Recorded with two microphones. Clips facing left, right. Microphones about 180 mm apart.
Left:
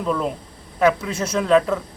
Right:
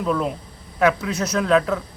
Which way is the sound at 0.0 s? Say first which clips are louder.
Even; centre (ahead or behind).